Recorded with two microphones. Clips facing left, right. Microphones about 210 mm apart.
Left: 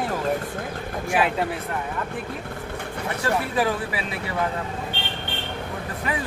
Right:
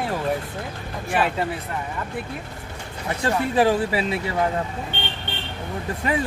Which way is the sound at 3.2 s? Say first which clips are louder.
Right 4 dB; 30° right (ahead or behind).